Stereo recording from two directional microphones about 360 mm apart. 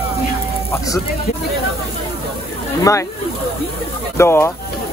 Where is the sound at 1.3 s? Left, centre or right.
Centre.